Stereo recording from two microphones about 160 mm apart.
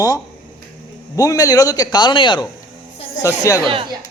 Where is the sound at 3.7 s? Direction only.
35° right (ahead or behind).